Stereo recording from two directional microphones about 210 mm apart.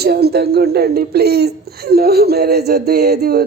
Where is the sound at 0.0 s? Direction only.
50° right (ahead or behind).